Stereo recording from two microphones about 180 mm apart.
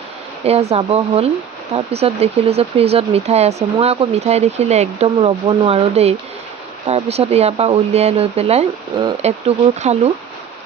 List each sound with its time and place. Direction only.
0.4 s speech: 35° right (ahead or behind)